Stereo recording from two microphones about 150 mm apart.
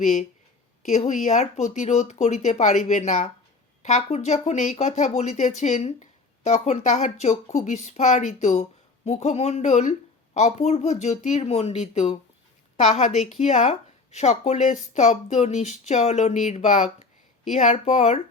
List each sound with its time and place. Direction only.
0.0 s speech: 50° left (ahead or behind)